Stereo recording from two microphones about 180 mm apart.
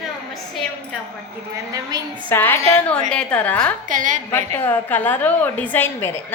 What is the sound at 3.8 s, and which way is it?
Speech, 45° right (ahead or behind).